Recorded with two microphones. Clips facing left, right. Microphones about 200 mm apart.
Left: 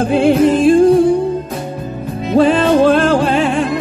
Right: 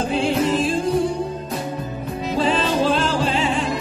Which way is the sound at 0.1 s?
60° left (ahead or behind).